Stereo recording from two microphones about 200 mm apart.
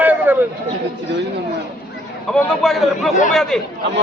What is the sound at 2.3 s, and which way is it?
Speech, 5° left (ahead or behind).